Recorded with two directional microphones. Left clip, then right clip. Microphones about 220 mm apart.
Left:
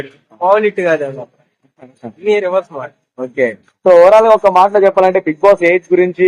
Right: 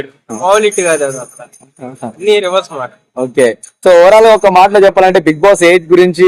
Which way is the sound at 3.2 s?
55° right (ahead or behind).